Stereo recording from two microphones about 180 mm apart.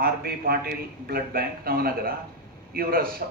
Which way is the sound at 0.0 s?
55° right (ahead or behind).